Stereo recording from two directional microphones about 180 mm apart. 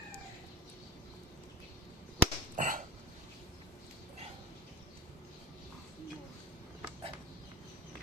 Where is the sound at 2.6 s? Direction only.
50° right (ahead or behind).